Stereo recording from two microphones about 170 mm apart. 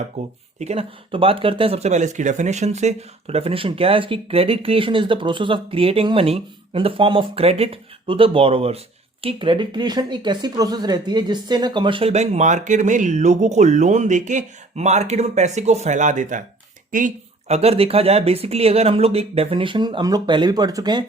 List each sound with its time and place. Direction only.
0.2 s speech: 40° right (ahead or behind)
17.5 s speech: 35° right (ahead or behind)